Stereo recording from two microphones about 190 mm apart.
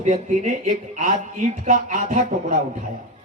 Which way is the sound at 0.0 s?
40° right (ahead or behind).